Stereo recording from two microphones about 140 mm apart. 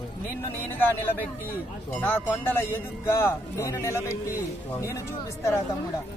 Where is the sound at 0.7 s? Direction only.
15° left (ahead or behind).